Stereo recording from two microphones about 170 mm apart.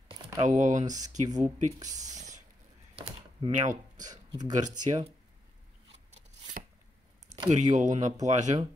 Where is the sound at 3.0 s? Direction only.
30° right (ahead or behind).